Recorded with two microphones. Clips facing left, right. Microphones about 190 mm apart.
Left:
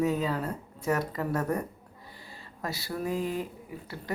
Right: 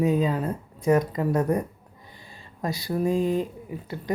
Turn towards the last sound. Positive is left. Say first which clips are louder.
# right 6 dB
turn(degrees=-20)  # may be behind; listen again after turning